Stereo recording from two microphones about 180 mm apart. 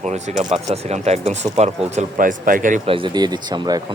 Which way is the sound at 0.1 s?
40° right (ahead or behind).